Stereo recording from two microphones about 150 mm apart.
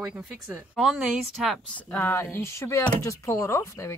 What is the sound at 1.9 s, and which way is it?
Speech, 15° left (ahead or behind).